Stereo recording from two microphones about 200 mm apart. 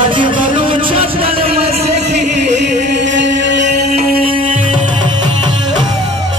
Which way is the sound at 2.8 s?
60° right (ahead or behind).